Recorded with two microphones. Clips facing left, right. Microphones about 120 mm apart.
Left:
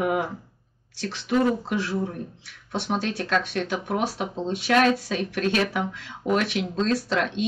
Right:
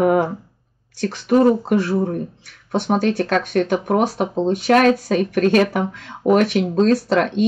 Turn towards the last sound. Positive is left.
turn(degrees=-50)  # may be behind; listen again after turning